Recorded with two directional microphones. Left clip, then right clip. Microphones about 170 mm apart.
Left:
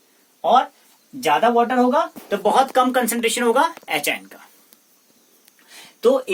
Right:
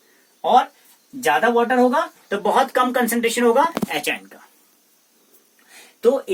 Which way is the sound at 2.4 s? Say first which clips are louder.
Left 1 dB; 45° left (ahead or behind).